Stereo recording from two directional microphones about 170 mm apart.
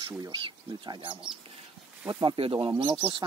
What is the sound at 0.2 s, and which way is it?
Speech, 25° right (ahead or behind).